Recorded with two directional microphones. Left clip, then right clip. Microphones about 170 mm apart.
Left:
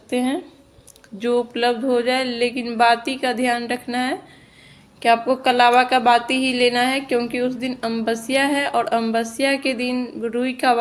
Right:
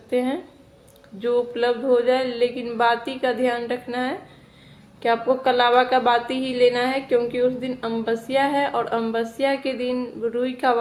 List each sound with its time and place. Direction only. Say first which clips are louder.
0.1 s speech: left 1 dB; 35° left (ahead or behind)